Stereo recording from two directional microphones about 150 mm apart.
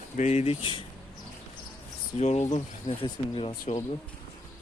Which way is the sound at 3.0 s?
35° left (ahead or behind).